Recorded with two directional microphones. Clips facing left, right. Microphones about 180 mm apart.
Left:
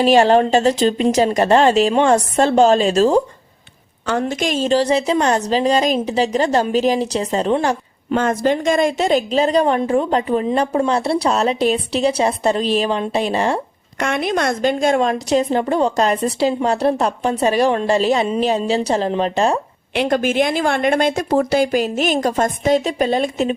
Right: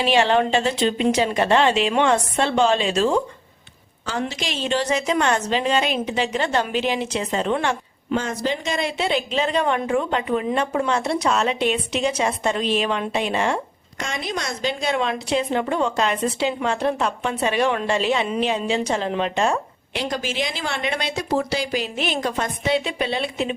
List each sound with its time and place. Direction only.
0.0 s a woman's voice: 40° left (ahead or behind)
4.2 s a woman's voice: 50° left (ahead or behind)
8.1 s a woman's voice: 55° left (ahead or behind); by 13.6 s 35° left (ahead or behind)
14.0 s a woman's voice: 60° left (ahead or behind); by 19.5 s 35° left (ahead or behind)
19.9 s speech: 60° left (ahead or behind); by 23.6 s 45° left (ahead or behind)